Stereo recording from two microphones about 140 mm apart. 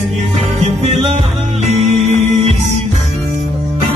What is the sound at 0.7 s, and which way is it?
Music, 50° right (ahead or behind).